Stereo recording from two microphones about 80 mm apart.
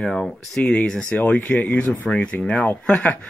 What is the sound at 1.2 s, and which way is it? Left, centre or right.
Speech, left.